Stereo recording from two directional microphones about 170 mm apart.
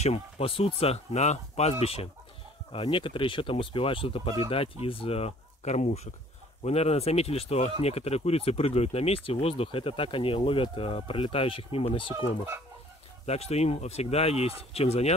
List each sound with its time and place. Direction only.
0.0 s speech: 35° left (ahead or behind)
13.2 s speech: 40° left (ahead or behind)